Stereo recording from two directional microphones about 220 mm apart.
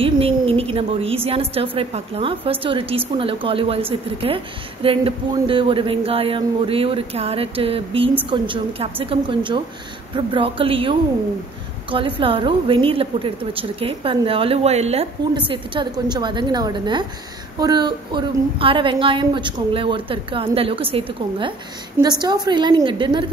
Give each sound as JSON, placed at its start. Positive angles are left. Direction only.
{"t": 0.0, "sound": "a woman's voice", "side_deg": -25}
{"t": 4.8, "sound": "a woman's voice", "side_deg": -25}